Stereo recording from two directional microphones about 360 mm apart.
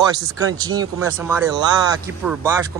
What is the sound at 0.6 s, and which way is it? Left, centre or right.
Speech, centre.